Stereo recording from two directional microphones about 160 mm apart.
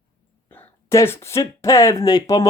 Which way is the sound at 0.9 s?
15° left (ahead or behind).